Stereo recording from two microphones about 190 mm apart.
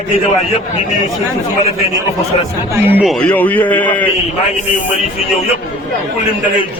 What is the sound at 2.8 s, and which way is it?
Speech, 10° right (ahead or behind).